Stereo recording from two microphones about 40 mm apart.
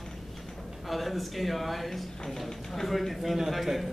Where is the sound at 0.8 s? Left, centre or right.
Centre.